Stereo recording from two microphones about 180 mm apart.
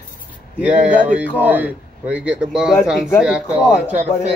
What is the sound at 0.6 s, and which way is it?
Speech, 5° right (ahead or behind).